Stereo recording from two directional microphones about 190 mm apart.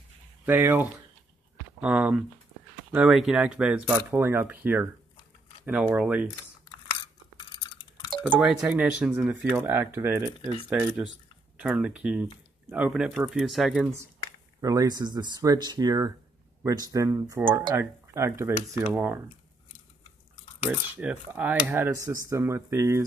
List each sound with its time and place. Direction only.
0.5 s speech: 10° right (ahead or behind)
8.4 s speech: 5° right (ahead or behind)
14.6 s speech: 20° right (ahead or behind)
20.9 s speech: 10° right (ahead or behind)